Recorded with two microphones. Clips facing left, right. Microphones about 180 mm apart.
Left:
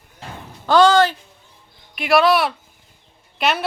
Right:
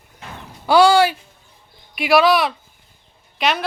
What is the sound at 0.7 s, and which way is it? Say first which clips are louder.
Speech: right 1 dB; 10° right (ahead or behind).